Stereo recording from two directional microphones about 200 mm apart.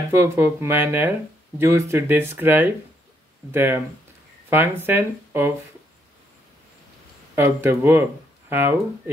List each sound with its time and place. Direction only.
0.1 s speech: 10° right (ahead or behind)
7.3 s speech: 10° right (ahead or behind)